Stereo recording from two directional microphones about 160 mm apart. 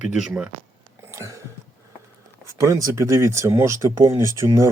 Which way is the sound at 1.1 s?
20° right (ahead or behind).